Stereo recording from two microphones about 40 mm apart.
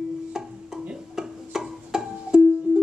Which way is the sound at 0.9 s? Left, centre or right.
Centre.